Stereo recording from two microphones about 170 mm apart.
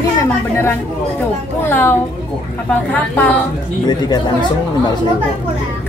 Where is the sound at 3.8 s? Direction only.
25° left (ahead or behind).